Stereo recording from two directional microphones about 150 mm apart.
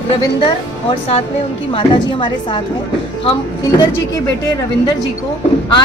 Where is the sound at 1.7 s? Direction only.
35° left (ahead or behind).